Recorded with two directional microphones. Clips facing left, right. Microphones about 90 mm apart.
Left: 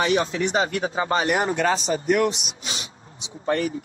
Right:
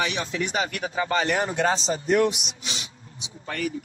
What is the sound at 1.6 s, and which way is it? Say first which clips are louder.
Speech: left 1 dB; 25° right (ahead or behind).